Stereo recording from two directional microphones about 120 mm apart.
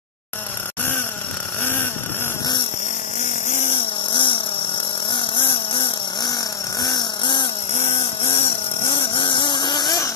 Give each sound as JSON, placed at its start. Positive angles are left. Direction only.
{"t": 3.4, "sound": "vehicle", "side_deg": 70}
{"t": 3.7, "sound": "a sound", "side_deg": 45}
{"t": 5.1, "sound": "vehicle", "side_deg": 45}
{"t": 6.8, "sound": "chainsaw", "side_deg": 40}
{"t": 7.7, "sound": "a sound", "side_deg": 65}
{"t": 8.0, "sound": "vehicle", "side_deg": 50}